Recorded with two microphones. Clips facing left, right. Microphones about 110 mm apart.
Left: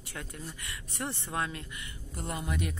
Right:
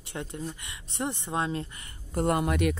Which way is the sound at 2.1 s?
60° right (ahead or behind).